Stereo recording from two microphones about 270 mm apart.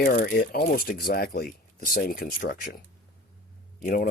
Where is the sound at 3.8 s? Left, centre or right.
Left.